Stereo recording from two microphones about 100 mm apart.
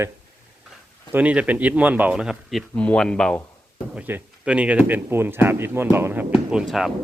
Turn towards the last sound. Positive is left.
turn(degrees=-5)  # may be behind; listen again after turning